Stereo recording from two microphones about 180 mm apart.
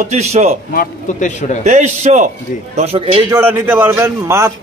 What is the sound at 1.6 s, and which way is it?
Speech, 40° right (ahead or behind).